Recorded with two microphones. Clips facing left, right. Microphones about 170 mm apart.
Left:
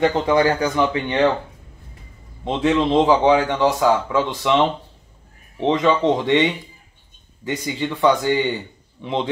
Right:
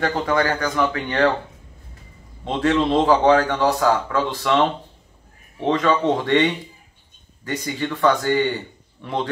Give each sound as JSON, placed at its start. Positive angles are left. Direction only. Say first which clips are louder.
{"t": 0.0, "sound": "speech", "louder": "left 4 dB", "side_deg": 20}
{"t": 2.4, "sound": "a man's voice", "louder": "left 1 dB", "side_deg": 15}
{"t": 7.6, "sound": "a man's voice", "louder": "left 1 dB", "side_deg": 10}